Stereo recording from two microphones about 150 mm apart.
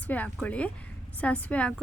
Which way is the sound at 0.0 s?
10° left (ahead or behind).